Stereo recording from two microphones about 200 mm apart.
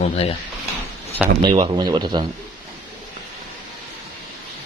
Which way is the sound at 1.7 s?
20° right (ahead or behind).